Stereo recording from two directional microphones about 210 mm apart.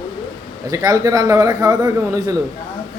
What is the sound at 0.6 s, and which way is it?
A man's voice, 15° right (ahead or behind).